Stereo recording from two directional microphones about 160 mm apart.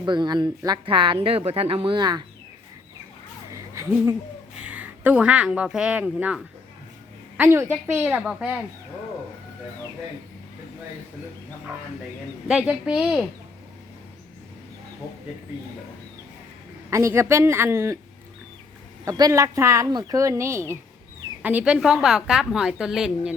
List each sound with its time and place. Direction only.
0.0 s speech: 30° right (ahead or behind)
3.5 s a sound: 15° right (ahead or behind)
4.5 s a woman's voice: 10° right (ahead or behind)
12.5 s a woman's voice: 5° right (ahead or behind)
16.9 s speech: 15° right (ahead or behind)
19.0 s a woman's voice: 20° right (ahead or behind); by 23.3 s 5° right (ahead or behind)